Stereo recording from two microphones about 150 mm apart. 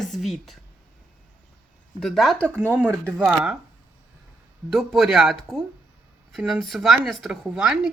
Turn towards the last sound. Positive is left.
turn(degrees=-5)  # may be behind; listen again after turning